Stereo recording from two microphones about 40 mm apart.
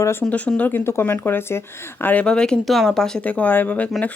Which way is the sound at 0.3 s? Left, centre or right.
Left.